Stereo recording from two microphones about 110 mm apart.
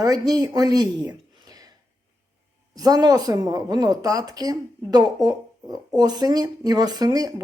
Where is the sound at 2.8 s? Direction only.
35° right (ahead or behind).